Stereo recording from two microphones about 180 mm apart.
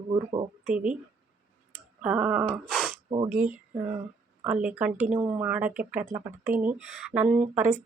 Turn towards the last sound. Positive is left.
turn(degrees=-10)  # may be behind; listen again after turning